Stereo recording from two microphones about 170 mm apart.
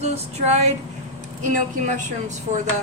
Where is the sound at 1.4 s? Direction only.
45° right (ahead or behind).